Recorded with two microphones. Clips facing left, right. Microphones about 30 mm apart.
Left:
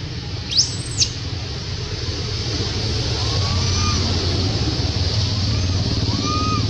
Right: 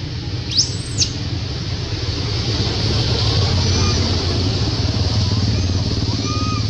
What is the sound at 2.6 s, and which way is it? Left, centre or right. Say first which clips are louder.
Vehicle: right 5 dB; right.